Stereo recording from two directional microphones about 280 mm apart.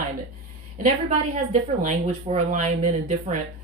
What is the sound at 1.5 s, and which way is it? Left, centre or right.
Speech, right.